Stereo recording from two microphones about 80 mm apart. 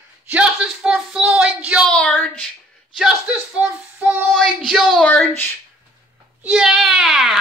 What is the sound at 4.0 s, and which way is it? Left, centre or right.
Child singing, centre.